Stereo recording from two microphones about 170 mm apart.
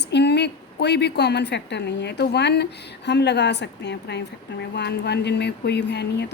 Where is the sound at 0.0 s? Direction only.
85° left.